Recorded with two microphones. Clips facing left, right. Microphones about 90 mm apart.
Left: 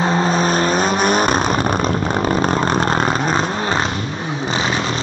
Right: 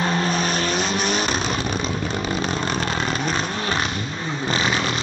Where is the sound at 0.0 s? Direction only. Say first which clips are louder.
Left 5 dB; 30° left (ahead or behind).